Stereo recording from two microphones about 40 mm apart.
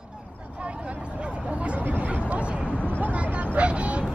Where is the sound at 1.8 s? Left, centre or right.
Right.